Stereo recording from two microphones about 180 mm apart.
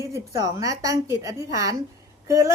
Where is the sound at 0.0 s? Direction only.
20° right (ahead or behind).